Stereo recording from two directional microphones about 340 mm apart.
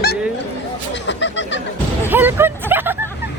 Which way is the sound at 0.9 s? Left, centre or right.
Left.